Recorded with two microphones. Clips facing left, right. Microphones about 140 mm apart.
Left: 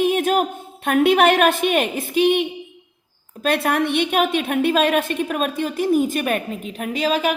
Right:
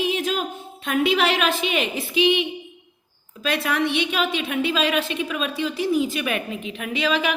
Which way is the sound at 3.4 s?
55° left (ahead or behind).